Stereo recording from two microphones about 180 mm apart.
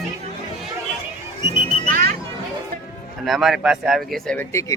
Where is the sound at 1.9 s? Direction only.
50° right (ahead or behind).